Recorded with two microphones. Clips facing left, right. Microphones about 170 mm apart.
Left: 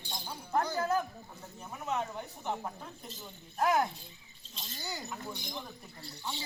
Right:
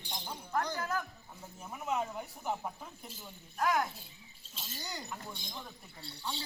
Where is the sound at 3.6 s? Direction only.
25° left (ahead or behind).